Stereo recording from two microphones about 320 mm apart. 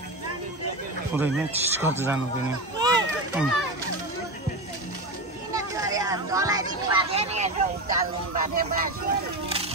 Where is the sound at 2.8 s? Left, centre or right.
Centre.